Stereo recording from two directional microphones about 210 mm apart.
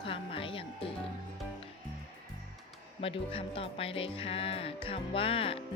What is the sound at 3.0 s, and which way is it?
Speech, 25° left (ahead or behind).